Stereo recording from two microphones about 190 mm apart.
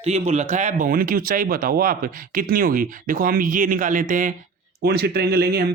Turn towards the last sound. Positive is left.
turn(degrees=-55)  # may be behind; listen again after turning